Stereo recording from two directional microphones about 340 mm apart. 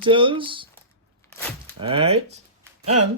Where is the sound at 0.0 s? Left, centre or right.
Centre.